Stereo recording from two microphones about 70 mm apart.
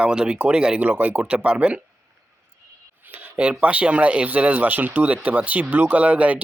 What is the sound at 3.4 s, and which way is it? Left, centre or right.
Speech, centre.